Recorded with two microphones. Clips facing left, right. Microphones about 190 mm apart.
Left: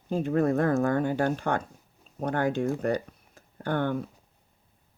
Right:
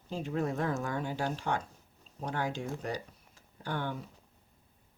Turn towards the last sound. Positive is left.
turn(degrees=55)  # may be behind; listen again after turning